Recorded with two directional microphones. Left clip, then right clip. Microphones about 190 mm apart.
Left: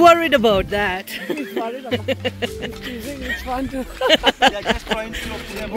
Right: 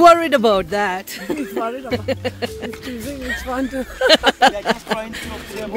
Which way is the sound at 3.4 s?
70° right (ahead or behind).